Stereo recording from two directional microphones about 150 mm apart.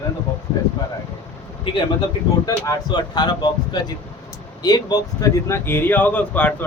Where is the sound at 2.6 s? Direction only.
25° left (ahead or behind).